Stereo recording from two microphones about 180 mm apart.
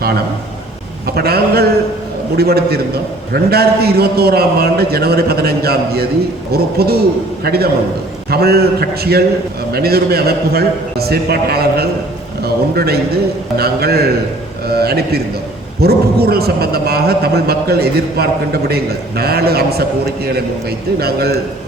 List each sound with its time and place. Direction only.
1.0 s a man's voice: 60° right (ahead or behind)